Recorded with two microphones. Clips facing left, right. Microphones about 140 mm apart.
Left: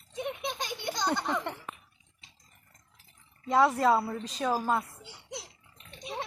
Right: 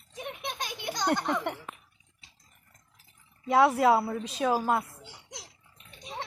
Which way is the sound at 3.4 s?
5° right (ahead or behind).